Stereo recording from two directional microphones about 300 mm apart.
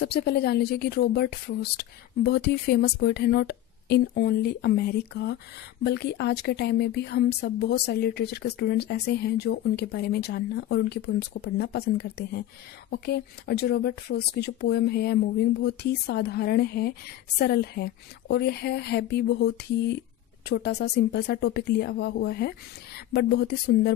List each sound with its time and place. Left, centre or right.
0.0 s speech: left